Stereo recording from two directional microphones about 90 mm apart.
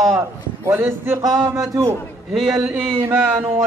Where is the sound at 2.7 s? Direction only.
25° right (ahead or behind).